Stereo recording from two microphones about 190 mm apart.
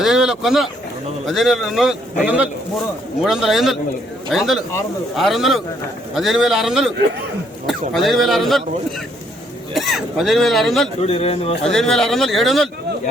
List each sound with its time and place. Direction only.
0.0 s a man's voice: 5° right (ahead or behind)
9.7 s a man's voice: centre (ahead or behind)
11.0 s a man's voice: 35° left (ahead or behind)
11.6 s a man's voice: centre (ahead or behind)